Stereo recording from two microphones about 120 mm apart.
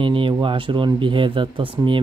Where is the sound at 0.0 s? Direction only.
45° right (ahead or behind).